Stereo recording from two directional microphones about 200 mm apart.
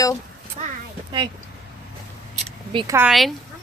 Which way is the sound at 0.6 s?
40° right (ahead or behind).